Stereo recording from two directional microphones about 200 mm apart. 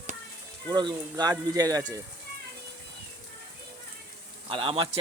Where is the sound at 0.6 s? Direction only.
20° right (ahead or behind).